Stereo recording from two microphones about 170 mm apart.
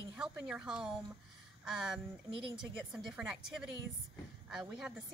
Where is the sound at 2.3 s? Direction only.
30° right (ahead or behind).